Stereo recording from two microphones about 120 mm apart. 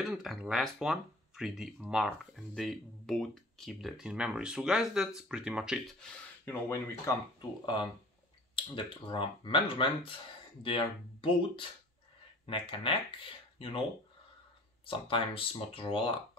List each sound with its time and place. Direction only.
0.0 s speech: centre (ahead or behind)
5.9 s speech: 15° left (ahead or behind)
7.6 s speech: 40° left (ahead or behind)
14.9 s speech: 45° left (ahead or behind)